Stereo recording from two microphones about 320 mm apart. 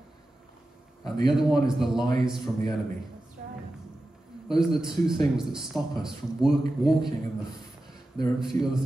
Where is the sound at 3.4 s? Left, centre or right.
Right.